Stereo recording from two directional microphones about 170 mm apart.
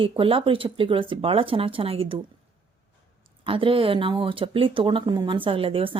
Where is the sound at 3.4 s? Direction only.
30° right (ahead or behind).